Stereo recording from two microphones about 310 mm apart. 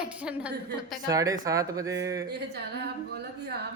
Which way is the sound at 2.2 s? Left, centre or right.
Right.